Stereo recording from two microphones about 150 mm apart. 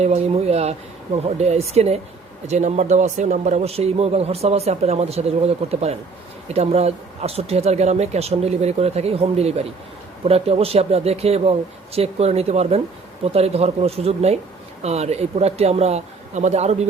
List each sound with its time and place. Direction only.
0.0 s speech: 45° right (ahead or behind)